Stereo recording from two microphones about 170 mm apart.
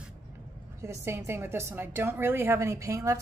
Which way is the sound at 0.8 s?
15° right (ahead or behind).